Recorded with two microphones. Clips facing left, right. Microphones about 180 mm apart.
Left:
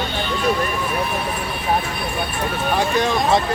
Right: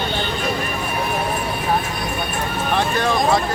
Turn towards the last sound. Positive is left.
turn(degrees=20)  # may be behind; listen again after turning